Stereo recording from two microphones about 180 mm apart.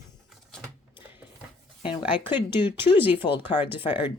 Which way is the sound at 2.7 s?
10° right (ahead or behind).